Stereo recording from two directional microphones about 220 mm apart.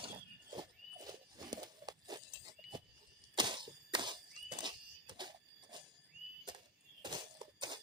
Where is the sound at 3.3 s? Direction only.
20° right (ahead or behind).